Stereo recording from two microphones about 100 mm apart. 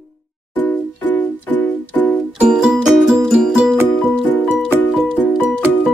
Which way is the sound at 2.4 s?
10° right (ahead or behind).